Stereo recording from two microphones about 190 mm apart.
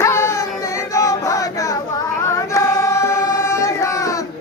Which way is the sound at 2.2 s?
15° left (ahead or behind).